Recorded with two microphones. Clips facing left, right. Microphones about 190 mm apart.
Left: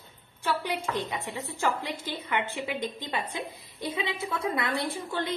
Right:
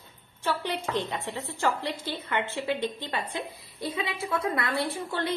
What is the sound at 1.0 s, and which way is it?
A woman's voice, 15° left (ahead or behind).